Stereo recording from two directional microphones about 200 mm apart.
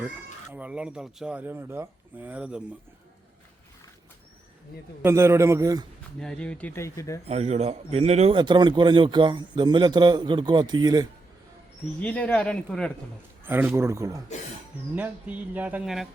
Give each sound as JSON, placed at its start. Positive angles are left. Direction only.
{"t": 0.5, "sound": "speech", "side_deg": -5}
{"t": 5.0, "sound": "speech", "side_deg": -15}
{"t": 6.1, "sound": "speech", "side_deg": 5}
{"t": 7.3, "sound": "speech", "side_deg": -35}
{"t": 11.9, "sound": "speech", "side_deg": 5}
{"t": 13.4, "sound": "speech", "side_deg": -10}